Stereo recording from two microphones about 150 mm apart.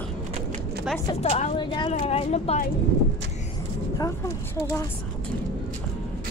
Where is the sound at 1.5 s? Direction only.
35° left (ahead or behind).